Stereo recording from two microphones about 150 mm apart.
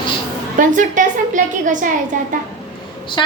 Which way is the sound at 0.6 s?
60° right (ahead or behind).